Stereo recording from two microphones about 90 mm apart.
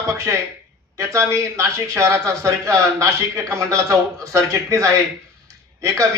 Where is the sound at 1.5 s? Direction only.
35° right (ahead or behind).